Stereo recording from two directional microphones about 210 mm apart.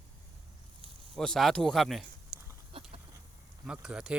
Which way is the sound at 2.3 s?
45° right (ahead or behind).